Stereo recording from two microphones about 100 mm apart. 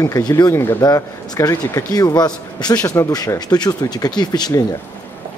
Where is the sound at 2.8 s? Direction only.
30° left (ahead or behind).